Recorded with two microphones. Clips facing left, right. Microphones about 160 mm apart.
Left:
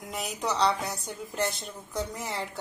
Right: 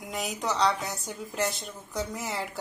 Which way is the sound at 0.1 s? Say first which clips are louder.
Even; centre (ahead or behind).